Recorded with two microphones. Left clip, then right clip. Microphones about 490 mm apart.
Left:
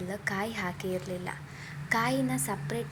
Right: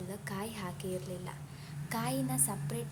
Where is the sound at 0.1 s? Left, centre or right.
Right.